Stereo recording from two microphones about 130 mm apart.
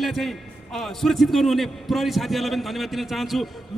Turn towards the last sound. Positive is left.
turn(degrees=0)  # may be behind; listen again after turning